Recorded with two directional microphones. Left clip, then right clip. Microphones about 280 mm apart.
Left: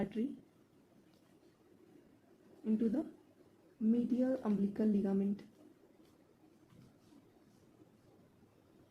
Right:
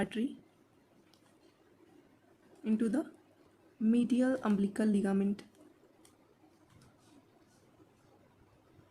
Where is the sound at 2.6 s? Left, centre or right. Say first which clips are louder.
Right 3 dB; right.